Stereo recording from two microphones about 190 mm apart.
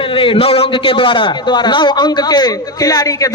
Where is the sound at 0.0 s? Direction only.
25° left (ahead or behind).